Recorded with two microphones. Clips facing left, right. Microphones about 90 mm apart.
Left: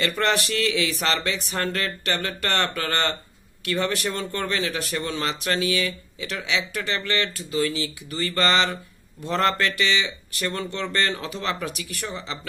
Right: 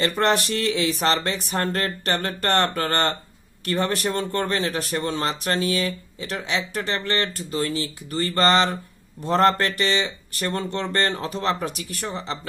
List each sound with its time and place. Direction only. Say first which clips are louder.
0.0 s speech: right 2 dB; 35° right (ahead or behind)